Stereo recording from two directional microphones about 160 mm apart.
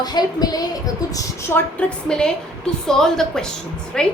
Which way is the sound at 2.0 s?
5° left (ahead or behind).